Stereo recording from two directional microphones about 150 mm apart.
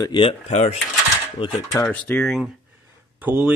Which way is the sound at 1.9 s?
10° left (ahead or behind).